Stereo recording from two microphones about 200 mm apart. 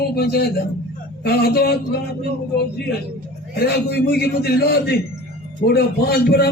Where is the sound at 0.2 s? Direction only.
50° left (ahead or behind).